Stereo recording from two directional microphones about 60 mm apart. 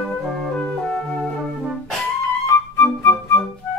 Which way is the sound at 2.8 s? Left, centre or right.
Left.